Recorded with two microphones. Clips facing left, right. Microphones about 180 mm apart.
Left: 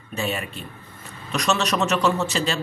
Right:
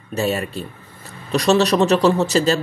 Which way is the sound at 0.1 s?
40° right (ahead or behind).